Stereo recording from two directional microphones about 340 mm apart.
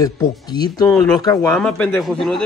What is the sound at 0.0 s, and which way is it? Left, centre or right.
Speech, centre.